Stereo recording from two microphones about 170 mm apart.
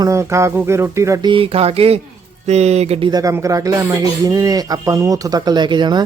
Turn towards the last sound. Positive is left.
turn(degrees=-25)  # may be behind; listen again after turning